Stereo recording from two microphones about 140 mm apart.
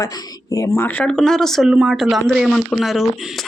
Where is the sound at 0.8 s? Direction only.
10° left (ahead or behind).